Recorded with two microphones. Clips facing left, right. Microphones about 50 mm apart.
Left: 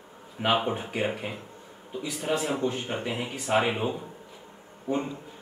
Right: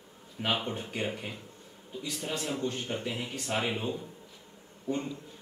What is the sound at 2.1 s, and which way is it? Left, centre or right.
A man's voice, centre.